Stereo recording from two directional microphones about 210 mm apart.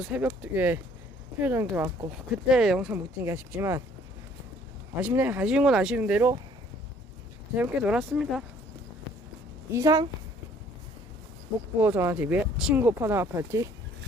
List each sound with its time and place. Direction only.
0.0 s speech: 5° right (ahead or behind)
4.9 s speech: 10° right (ahead or behind)
7.5 s speech: 5° right (ahead or behind)
9.7 s speech: 15° right (ahead or behind)
11.8 s speech: 10° right (ahead or behind)